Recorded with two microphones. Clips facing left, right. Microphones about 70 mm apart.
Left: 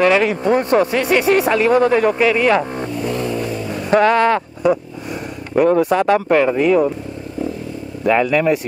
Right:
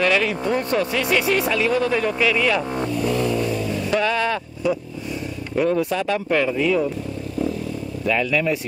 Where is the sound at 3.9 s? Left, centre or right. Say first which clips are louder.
Left 9 dB; left.